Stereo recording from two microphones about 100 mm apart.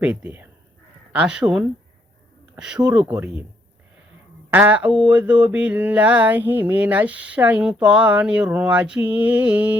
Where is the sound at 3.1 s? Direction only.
15° right (ahead or behind).